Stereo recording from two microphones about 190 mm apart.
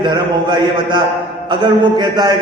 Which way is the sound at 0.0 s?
25° right (ahead or behind).